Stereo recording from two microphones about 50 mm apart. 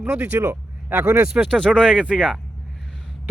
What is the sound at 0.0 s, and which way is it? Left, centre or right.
Speech, right.